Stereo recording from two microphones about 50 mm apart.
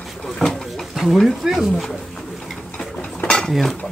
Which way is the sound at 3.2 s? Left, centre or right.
Centre.